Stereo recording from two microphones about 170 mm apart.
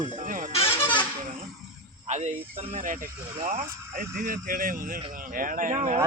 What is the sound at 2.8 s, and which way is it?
Speech, 50° right (ahead or behind).